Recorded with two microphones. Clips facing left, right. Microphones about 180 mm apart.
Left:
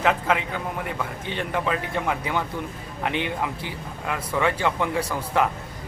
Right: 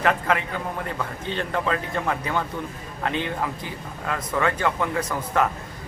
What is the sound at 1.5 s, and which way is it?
Speech, 15° left (ahead or behind).